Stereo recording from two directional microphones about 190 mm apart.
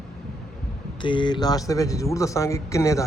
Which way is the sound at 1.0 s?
25° left (ahead or behind).